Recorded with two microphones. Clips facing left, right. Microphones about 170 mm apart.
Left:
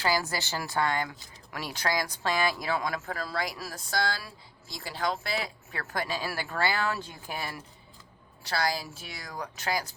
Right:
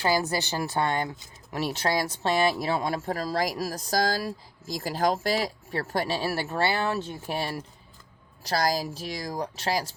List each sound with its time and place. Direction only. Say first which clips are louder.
0.0 s speech: right 4 dB; 20° right (ahead or behind)